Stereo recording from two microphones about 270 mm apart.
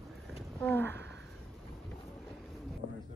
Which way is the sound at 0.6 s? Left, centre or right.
Centre.